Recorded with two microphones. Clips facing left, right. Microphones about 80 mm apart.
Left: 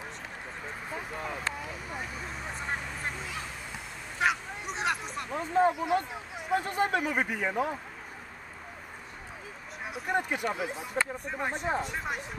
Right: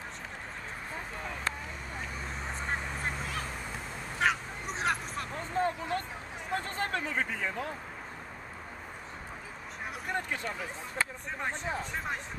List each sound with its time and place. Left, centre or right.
3.0 s honk: centre
4.2 s a sound: centre
6.5 s speech: centre
10.1 s speech: centre